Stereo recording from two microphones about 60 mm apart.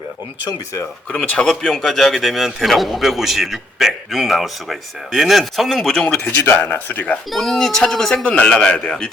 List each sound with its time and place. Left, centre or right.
1.1 s speech: centre
1.5 s a man's voice: centre
6.6 s speech: left
7.3 s a man's voice: centre
8.2 s a man's voice: left